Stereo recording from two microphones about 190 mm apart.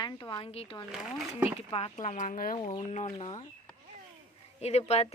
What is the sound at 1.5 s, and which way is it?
A woman's voice, 30° left (ahead or behind).